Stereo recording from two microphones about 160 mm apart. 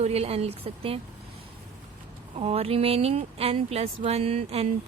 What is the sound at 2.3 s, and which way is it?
Speech, 40° right (ahead or behind).